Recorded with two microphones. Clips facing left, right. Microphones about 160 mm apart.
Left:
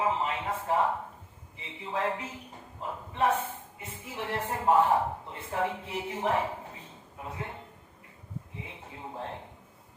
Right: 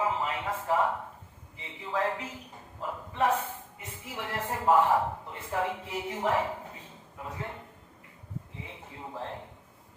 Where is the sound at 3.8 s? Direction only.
25° left (ahead or behind).